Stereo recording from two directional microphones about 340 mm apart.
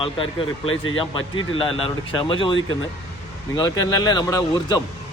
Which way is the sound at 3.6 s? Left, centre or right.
Centre.